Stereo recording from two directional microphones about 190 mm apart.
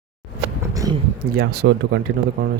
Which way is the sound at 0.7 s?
20° right (ahead or behind).